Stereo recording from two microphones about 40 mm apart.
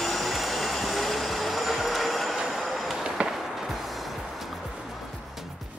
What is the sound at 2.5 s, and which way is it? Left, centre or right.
Train, centre.